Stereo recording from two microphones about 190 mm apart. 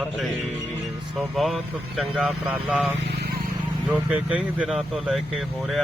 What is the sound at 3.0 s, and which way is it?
Vehicle, 60° right (ahead or behind).